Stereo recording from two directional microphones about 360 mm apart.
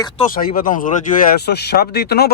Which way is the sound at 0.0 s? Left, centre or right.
Left.